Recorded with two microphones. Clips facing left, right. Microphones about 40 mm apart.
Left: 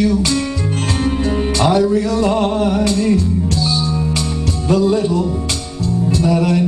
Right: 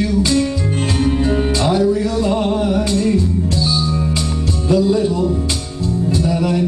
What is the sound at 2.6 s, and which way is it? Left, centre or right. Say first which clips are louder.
Music: left 1 dB; left.